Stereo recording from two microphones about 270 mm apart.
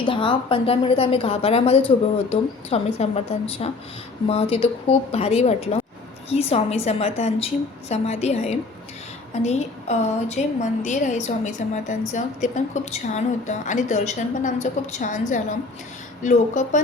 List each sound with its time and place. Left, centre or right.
0.0 s a woman's voice: centre